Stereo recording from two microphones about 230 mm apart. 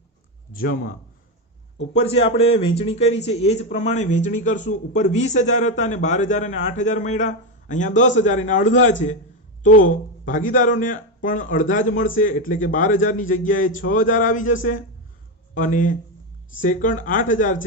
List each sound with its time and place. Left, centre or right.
0.5 s speech: left
2.0 s a man's voice: left